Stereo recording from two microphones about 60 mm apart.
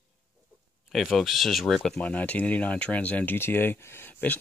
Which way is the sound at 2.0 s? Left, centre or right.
Left.